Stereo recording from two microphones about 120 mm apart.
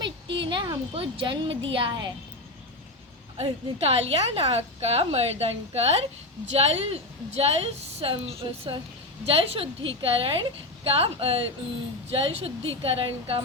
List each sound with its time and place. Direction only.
0.5 s a sound: 35° right (ahead or behind)
0.9 s speech: 45° right (ahead or behind)
3.3 s a woman's voice: 60° right (ahead or behind)